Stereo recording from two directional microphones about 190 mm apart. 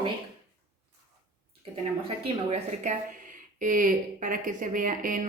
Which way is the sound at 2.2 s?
35° right (ahead or behind).